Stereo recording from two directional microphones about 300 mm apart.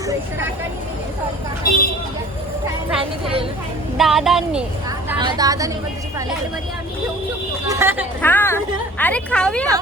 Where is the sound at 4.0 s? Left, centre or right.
Centre.